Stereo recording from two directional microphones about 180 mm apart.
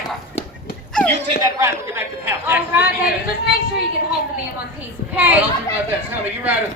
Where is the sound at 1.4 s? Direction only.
15° right (ahead or behind).